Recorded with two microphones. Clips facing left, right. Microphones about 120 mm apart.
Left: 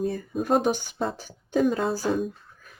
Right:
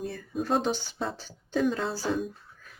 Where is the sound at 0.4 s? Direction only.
15° left (ahead or behind).